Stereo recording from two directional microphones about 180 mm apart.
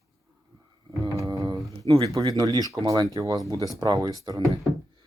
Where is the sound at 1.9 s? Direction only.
20° right (ahead or behind).